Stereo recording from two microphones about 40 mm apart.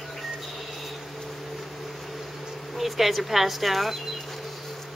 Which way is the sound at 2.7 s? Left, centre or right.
Centre.